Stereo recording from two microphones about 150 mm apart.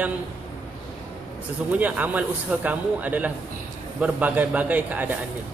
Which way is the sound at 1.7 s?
10° right (ahead or behind).